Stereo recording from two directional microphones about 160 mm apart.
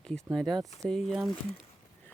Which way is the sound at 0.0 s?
5° left (ahead or behind).